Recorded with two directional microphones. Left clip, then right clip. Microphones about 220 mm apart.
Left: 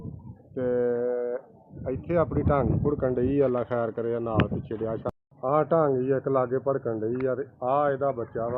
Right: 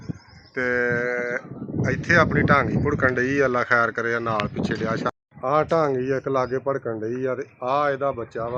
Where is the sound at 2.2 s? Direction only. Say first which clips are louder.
Right 5 dB; 25° right (ahead or behind).